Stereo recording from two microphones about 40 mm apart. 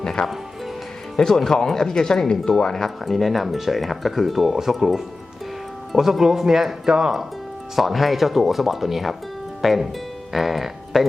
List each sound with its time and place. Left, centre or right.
0.0 s speech: centre
7.8 s speech: centre